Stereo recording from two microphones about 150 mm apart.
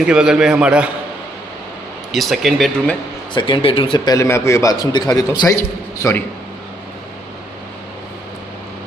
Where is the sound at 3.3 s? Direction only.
30° left (ahead or behind).